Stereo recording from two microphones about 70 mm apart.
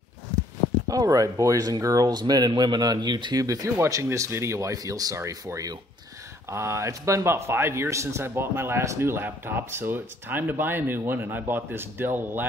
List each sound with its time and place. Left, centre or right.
0.8 s speech: right
2.0 s speech: right
3.4 s speech: right
6.5 s a man's voice: right